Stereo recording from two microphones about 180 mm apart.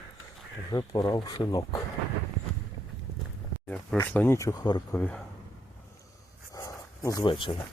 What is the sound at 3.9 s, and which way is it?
Speech, 10° left (ahead or behind).